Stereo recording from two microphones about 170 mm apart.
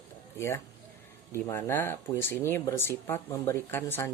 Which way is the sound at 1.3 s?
15° left (ahead or behind).